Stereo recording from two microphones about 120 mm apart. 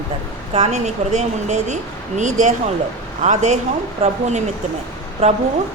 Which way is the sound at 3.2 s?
80° right.